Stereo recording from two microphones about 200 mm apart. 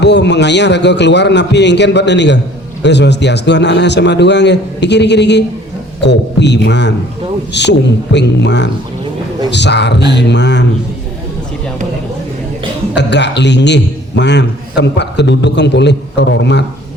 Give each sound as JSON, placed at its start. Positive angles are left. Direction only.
{"t": 0.0, "sound": "a man's voice", "side_deg": 60}
{"t": 13.0, "sound": "a man's voice", "side_deg": 60}